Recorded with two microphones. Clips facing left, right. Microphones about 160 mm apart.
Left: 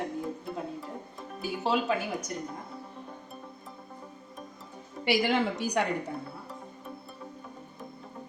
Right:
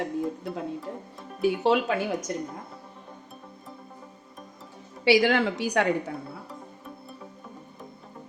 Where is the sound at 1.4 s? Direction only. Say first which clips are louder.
Right 7 dB; 70° right (ahead or behind).